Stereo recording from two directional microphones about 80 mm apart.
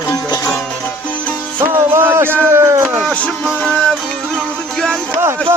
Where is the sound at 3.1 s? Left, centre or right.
Centre.